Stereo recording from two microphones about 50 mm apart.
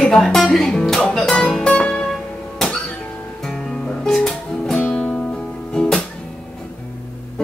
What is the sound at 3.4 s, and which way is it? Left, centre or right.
Music, centre.